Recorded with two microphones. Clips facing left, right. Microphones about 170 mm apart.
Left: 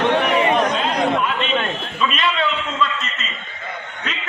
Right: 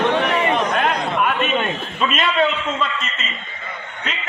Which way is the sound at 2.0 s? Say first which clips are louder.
Right 1 dB; 45° right (ahead or behind).